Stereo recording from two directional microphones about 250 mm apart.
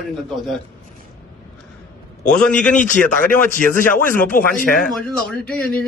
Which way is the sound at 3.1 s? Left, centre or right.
Left.